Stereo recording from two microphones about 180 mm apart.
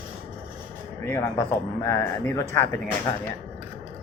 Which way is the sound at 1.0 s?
15° left (ahead or behind).